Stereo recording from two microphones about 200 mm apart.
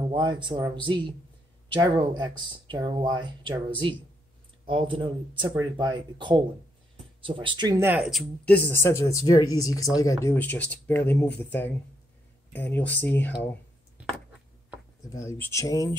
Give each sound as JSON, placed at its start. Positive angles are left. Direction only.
{"t": 0.1, "sound": "speech", "side_deg": -20}
{"t": 4.6, "sound": "speech", "side_deg": -25}
{"t": 12.5, "sound": "speech", "side_deg": 10}
{"t": 14.0, "sound": "a sound", "side_deg": -5}
{"t": 15.0, "sound": "speech", "side_deg": 15}